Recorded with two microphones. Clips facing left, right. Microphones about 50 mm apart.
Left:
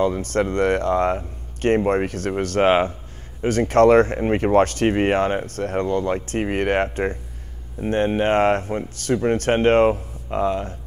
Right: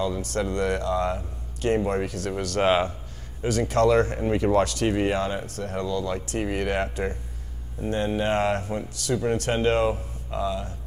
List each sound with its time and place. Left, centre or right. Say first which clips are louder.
0.0 s speech: left 6 dB; left